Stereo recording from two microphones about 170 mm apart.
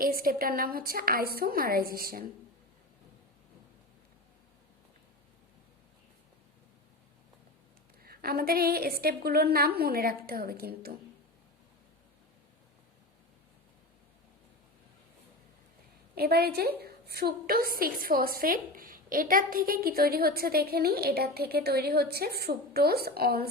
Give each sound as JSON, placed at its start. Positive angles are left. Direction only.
{"t": 0.0, "sound": "a woman's voice", "side_deg": -60}
{"t": 8.0, "sound": "a woman's voice", "side_deg": -65}
{"t": 16.1, "sound": "a woman's voice", "side_deg": -65}